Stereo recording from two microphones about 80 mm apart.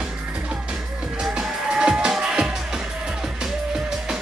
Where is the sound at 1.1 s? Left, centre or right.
Centre.